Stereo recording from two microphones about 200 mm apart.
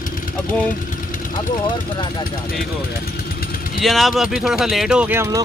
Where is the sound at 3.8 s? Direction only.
Centre (ahead or behind).